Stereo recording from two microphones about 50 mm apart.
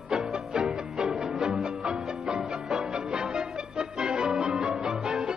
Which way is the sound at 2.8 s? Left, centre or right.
Centre.